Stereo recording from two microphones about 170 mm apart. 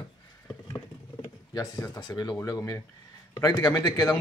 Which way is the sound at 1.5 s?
20° left (ahead or behind).